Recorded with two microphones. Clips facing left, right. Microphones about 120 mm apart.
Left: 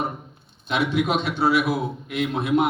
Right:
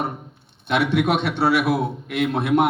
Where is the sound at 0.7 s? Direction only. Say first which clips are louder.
Right 3 dB; 65° right (ahead or behind).